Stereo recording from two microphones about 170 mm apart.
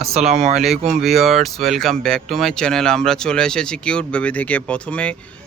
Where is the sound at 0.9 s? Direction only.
Centre (ahead or behind).